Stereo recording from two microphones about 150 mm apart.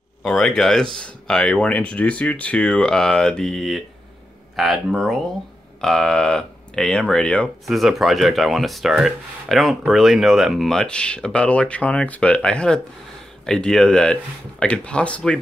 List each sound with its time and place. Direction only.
0.2 s speech: centre (ahead or behind)